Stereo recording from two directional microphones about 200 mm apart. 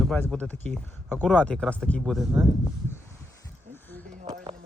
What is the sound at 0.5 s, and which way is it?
Speech, 35° right (ahead or behind).